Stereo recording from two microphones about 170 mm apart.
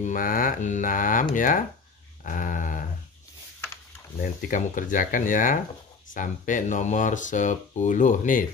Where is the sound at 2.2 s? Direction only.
50° left (ahead or behind).